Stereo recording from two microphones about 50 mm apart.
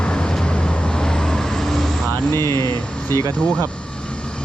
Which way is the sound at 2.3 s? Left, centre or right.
Left.